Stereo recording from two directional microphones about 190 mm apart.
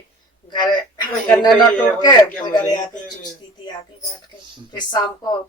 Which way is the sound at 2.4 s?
25° left (ahead or behind).